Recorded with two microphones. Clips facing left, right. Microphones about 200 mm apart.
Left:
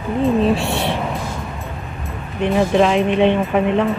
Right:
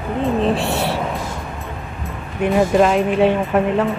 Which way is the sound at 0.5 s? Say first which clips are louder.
Even; centre (ahead or behind).